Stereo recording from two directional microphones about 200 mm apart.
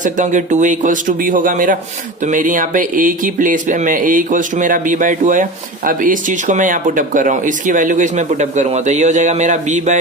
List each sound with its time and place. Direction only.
0.0 s speech: 40° right (ahead or behind)